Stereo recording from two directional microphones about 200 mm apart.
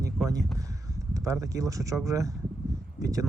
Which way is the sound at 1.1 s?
15° right (ahead or behind).